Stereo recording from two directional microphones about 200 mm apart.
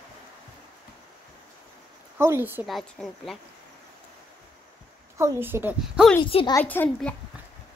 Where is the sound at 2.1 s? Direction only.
10° right (ahead or behind).